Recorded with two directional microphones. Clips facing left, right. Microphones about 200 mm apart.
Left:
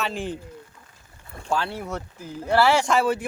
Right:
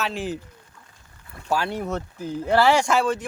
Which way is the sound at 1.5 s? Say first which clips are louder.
Right 2 dB; 15° right (ahead or behind).